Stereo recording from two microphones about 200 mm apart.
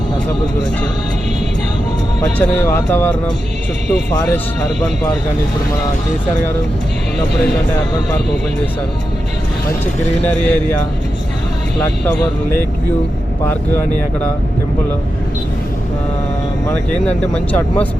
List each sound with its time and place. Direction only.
2.2 s speech: 15° left (ahead or behind)
10.3 s speech: 5° left (ahead or behind)
11.8 s speech: 10° left (ahead or behind)
16.6 s speech: 5° left (ahead or behind)